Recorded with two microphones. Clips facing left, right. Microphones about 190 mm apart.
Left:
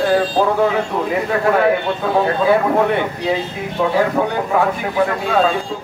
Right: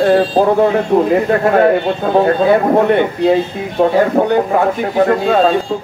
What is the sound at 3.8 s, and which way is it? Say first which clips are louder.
A man's voice: right 5 dB; 55° right (ahead or behind).